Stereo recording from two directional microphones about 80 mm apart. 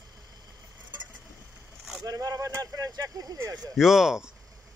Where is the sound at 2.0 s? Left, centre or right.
Right.